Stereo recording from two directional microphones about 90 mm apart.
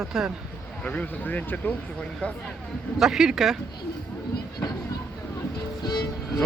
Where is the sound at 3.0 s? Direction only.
5° right (ahead or behind).